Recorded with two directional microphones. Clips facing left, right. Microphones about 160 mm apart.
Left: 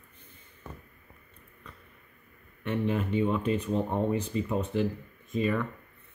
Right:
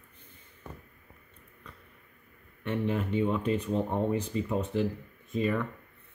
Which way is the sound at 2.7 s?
15° left (ahead or behind).